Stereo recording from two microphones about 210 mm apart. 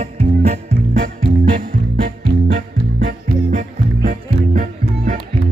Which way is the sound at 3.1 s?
40° right (ahead or behind).